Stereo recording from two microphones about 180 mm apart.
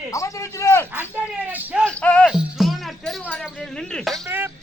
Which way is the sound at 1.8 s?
5° left (ahead or behind).